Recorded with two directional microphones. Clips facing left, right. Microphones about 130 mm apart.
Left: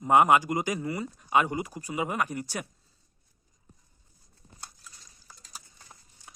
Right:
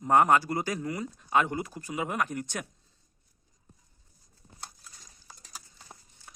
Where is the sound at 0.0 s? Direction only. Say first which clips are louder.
Left 1 dB; 15° left (ahead or behind).